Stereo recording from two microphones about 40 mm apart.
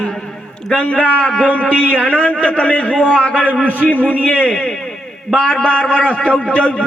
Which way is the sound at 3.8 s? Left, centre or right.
Left.